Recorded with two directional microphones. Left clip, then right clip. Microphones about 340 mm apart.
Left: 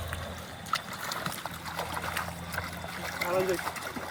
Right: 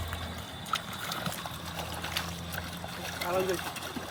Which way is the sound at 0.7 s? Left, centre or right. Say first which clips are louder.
Left 1 dB; centre.